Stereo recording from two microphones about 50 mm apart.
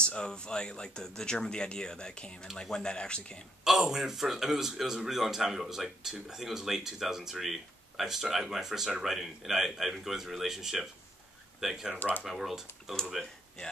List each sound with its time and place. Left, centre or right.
0.0 s speech: centre
3.6 s speech: centre